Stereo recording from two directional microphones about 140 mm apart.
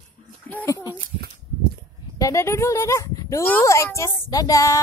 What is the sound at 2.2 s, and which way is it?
A child's voice, 20° left (ahead or behind).